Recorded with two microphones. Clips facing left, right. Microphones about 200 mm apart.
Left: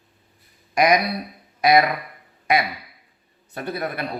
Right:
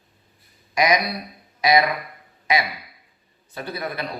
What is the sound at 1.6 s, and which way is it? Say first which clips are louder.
Speech: left 2 dB; 55° left (ahead or behind).